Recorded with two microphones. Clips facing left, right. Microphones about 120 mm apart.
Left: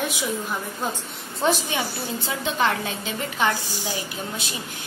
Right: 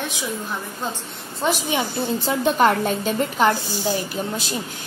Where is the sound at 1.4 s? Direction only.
15° right (ahead or behind).